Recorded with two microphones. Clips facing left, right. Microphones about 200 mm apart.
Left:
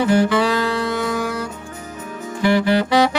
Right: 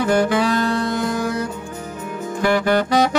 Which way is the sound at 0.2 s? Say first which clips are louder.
Even; 45° right (ahead or behind).